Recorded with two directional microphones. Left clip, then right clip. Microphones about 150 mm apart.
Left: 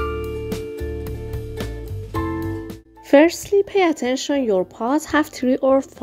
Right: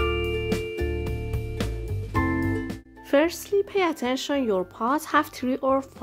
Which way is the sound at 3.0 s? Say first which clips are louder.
Left 8 dB; 30° left (ahead or behind).